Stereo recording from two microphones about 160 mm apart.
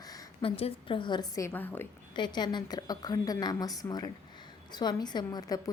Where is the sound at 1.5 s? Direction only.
10° left (ahead or behind).